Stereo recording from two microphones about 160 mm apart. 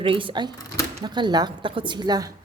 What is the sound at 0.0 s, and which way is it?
Speech, 35° right (ahead or behind).